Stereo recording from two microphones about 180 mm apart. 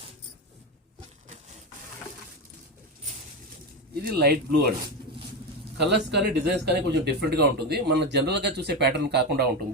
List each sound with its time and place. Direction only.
4.0 s speech: 60° right (ahead or behind)
5.7 s a man's voice: 70° right (ahead or behind)